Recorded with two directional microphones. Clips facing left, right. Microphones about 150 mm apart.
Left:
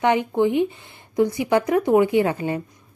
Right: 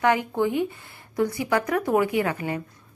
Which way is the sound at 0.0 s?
20° left (ahead or behind).